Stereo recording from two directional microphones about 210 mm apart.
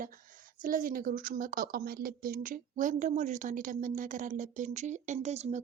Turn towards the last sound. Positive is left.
turn(degrees=-35)  # may be behind; listen again after turning